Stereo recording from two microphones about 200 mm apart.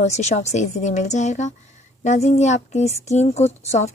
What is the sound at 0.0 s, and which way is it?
A woman's voice, 35° left (ahead or behind).